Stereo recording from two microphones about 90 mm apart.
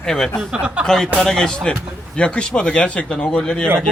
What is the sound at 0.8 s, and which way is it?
Speech, 5° left (ahead or behind).